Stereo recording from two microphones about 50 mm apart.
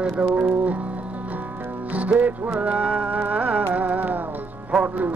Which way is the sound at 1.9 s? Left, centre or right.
Right.